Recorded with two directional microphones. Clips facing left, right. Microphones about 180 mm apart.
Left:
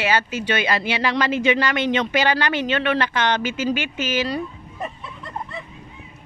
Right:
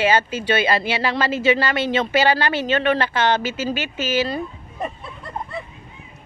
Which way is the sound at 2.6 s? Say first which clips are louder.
Right 4 dB; 40° right (ahead or behind).